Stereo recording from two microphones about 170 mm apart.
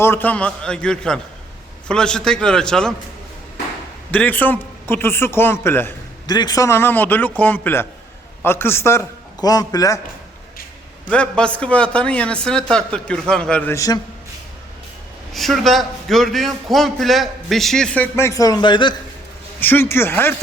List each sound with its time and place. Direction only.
0.0 s a man's voice: 10° left (ahead or behind)
4.1 s a man's voice: 10° left (ahead or behind)
6.2 s a man's voice: 25° left (ahead or behind)
11.1 s a man's voice: 5° left (ahead or behind)
15.3 s a man's voice: centre (ahead or behind); by 18.9 s 25° left (ahead or behind)
19.5 s a man's voice: 10° left (ahead or behind)